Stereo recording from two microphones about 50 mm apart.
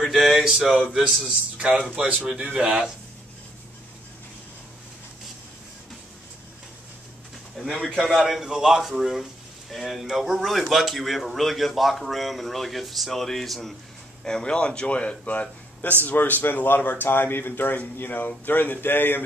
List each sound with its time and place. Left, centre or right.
0.0 s speech: centre
2.2 s speech: centre
7.5 s a sound: centre
8.0 s speech: centre
14.2 s speech: centre; by 19.2 s left